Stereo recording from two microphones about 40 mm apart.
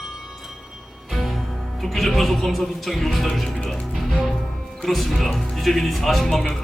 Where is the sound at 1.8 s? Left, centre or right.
Centre.